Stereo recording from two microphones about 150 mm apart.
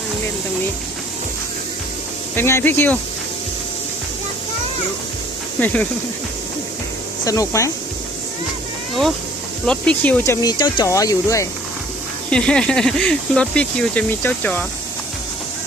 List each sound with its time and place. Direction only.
2.3 s speech: 15° left (ahead or behind)
5.5 s speech: 10° left (ahead or behind)
7.3 s speech: 20° left (ahead or behind)
9.6 s speech: 10° left (ahead or behind)
10.4 s speech: 25° left (ahead or behind)
12.3 s speech: 5° left (ahead or behind)